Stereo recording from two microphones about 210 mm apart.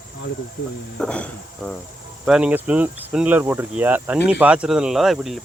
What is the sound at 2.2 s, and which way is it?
Cricket, 5° right (ahead or behind).